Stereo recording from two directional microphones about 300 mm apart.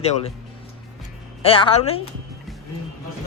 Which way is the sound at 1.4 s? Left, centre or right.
Centre.